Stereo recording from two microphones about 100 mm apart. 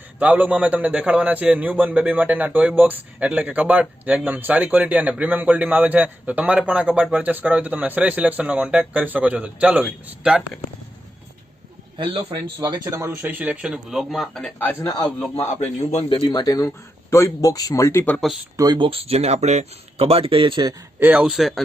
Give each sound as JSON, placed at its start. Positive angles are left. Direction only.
{"t": 0.2, "sound": "a man's voice", "side_deg": -15}
{"t": 11.9, "sound": "a man's voice", "side_deg": -55}
{"t": 12.7, "sound": "a man's voice", "side_deg": -30}
{"t": 14.8, "sound": "speech", "side_deg": 35}
{"t": 16.2, "sound": "speech", "side_deg": 45}
{"t": 18.5, "sound": "speech", "side_deg": -40}
{"t": 18.8, "sound": "speech", "side_deg": -70}
{"t": 21.0, "sound": "speech", "side_deg": -15}